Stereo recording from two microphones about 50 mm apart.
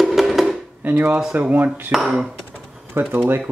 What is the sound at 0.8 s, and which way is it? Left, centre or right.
Speech, right.